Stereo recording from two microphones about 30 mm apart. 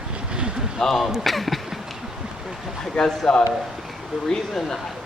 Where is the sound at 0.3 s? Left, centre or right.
Right.